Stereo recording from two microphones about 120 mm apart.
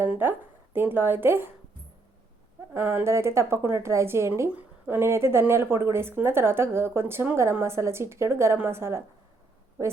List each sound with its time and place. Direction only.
0.0 s speech: 15° right (ahead or behind)
2.7 s speech: 20° right (ahead or behind)